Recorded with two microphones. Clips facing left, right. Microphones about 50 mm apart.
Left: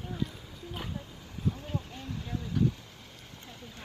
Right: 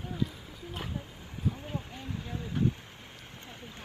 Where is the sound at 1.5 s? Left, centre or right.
Centre.